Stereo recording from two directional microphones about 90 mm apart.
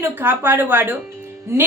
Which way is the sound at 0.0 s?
25° right (ahead or behind).